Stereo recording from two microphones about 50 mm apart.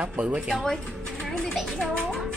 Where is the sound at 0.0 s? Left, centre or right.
Right.